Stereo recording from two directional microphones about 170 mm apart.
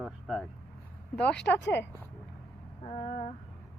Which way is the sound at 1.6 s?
90° left.